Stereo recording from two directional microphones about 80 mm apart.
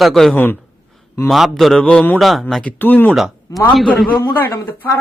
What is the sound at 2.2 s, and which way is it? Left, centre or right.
Speech, centre.